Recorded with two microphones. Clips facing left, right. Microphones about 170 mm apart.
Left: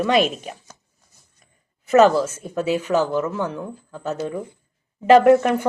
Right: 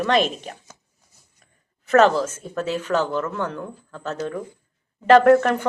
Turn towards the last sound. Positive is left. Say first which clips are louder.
# left 1 dB
turn(degrees=10)  # may be behind; listen again after turning